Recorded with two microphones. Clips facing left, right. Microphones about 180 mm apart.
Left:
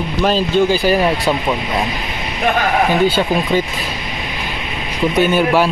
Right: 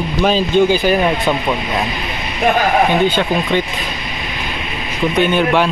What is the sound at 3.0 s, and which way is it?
Speech, 5° left (ahead or behind).